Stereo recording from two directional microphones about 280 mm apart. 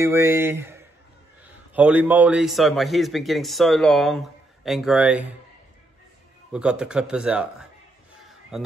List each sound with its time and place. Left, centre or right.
0.0 s a man's voice: centre
6.5 s a man's voice: centre
8.5 s a man's voice: centre